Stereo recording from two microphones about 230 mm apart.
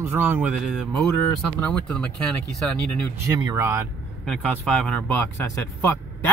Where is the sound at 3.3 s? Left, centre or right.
Centre.